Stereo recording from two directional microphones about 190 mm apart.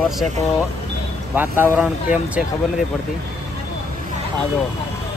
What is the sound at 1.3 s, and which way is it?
Speech, 10° right (ahead or behind).